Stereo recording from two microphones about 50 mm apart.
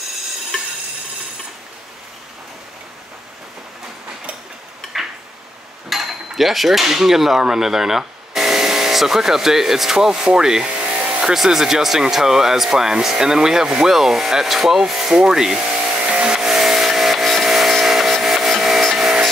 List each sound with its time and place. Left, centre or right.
0.5 s a sound: centre
5.9 s speech: centre
10.8 s car: right
11.3 s speech: centre
15.1 s a sound: centre; by 16.2 s right
16.2 s vehicle: centre